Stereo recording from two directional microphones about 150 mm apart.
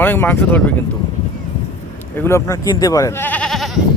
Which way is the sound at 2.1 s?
15° left (ahead or behind).